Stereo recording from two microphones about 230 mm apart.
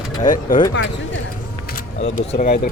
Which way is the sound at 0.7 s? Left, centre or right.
Left.